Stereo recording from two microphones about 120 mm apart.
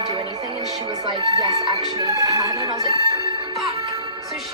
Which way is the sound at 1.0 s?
30° right (ahead or behind).